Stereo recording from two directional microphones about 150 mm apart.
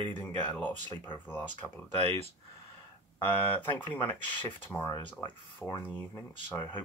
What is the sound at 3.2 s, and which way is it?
Speech, 10° left (ahead or behind).